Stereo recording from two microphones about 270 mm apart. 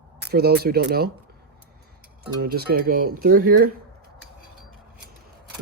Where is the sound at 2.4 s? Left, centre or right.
Right.